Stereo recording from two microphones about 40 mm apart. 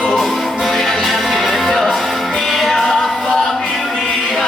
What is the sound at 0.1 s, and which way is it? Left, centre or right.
Music, centre.